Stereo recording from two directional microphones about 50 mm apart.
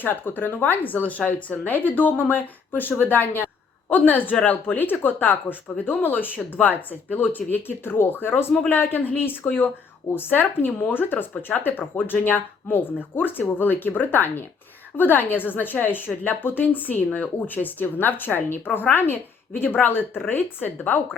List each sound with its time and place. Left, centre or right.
0.0 s a woman's voice: left